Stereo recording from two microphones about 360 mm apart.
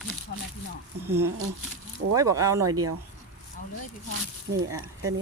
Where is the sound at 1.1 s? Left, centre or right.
Centre.